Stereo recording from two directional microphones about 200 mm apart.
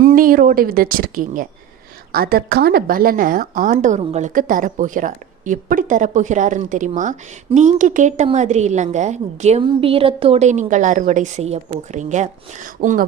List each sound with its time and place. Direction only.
0.0 s a woman's voice: 45° right (ahead or behind)